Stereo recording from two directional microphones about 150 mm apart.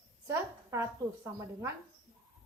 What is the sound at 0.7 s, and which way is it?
A woman's voice, 20° right (ahead or behind).